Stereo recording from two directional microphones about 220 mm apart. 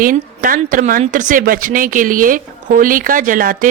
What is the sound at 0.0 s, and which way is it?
A woman's voice, 40° right (ahead or behind).